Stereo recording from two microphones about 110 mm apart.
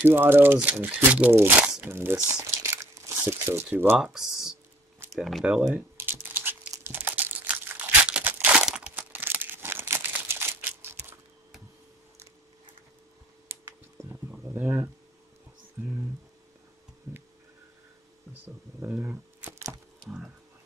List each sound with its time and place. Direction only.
0.0 s speech: 20° right (ahead or behind)
2.4 s crumpling: 25° right (ahead or behind)
4.0 s speech: 5° right (ahead or behind)
5.4 s speech: 10° right (ahead or behind)
5.8 s typing: 20° right (ahead or behind)
6.7 s crumpling: 20° right (ahead or behind)
13.5 s computer keyboard: 20° right (ahead or behind)
14.5 s speech: 20° right (ahead or behind)
18.4 s speech: 20° right (ahead or behind)